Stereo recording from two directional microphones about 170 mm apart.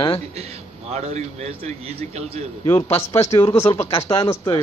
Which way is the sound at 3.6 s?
35° left (ahead or behind).